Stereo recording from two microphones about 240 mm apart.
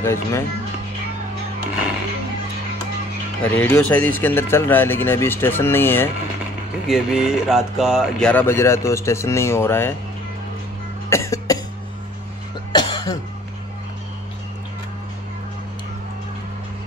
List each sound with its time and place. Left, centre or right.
0.0 s speech: centre
3.4 s speech: centre
6.9 s speech: centre
11.1 s cough: centre
12.7 s cough: centre